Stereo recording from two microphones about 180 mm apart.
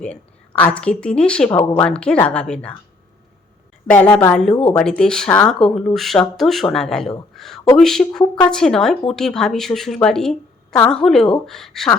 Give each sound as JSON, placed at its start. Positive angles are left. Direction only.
{"t": 0.0, "sound": "a woman's voice", "side_deg": 10}
{"t": 1.5, "sound": "speech", "side_deg": 20}
{"t": 1.8, "sound": "a woman's voice", "side_deg": 5}
{"t": 3.8, "sound": "a woman's voice", "side_deg": 10}
{"t": 7.3, "sound": "a sound", "side_deg": 0}
{"t": 7.8, "sound": "a woman's voice", "side_deg": 0}